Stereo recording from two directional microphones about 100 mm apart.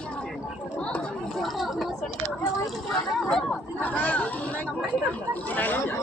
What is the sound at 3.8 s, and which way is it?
Chatter, 15° left (ahead or behind).